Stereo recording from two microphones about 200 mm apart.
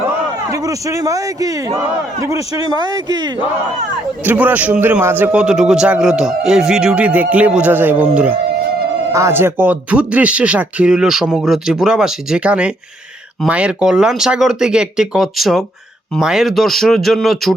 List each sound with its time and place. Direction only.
0.5 s a man's voice: 15° right (ahead or behind)
4.2 s a man's voice: 10° right (ahead or behind)